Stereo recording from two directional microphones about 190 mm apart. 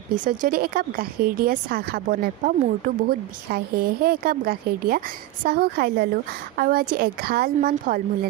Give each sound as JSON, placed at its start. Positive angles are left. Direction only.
{"t": 0.3, "sound": "speech", "side_deg": -50}